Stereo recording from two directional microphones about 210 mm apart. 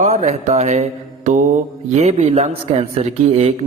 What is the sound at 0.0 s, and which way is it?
Mantra, 35° right (ahead or behind).